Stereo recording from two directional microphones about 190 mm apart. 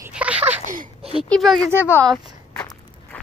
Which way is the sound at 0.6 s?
45° right (ahead or behind).